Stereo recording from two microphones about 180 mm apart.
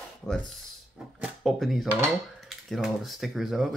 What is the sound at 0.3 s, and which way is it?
Speech, centre (ahead or behind).